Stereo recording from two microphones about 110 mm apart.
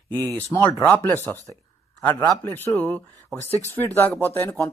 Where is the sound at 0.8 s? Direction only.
20° left (ahead or behind).